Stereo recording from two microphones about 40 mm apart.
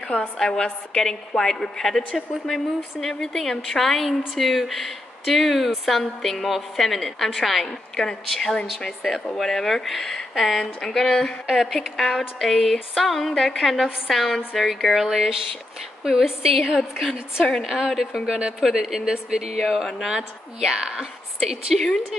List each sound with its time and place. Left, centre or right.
0.1 s a woman's voice: left
0.9 s a woman's voice: centre
7.6 s a woman's voice: centre
11.5 s a woman's voice: centre
17.6 s a woman's voice: centre
18.2 s speech: centre
18.6 s speech: centre
19.6 s a woman's voice: centre
21.7 s a woman's voice: centre